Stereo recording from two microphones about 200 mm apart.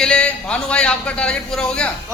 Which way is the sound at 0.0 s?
5° left (ahead or behind).